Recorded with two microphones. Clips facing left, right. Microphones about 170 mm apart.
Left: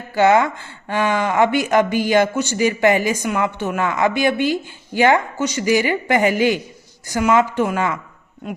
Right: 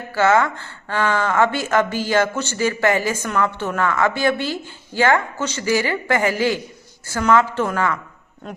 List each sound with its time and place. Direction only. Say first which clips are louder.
0.1 s speech: left 2 dB; 15° left (ahead or behind)